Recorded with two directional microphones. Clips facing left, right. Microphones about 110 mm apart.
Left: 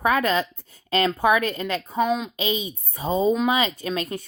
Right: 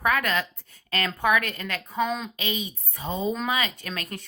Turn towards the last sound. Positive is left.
turn(degrees=25)  # may be behind; listen again after turning